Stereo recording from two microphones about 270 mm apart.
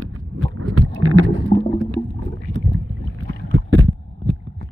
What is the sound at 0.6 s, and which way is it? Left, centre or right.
Rowboat, right.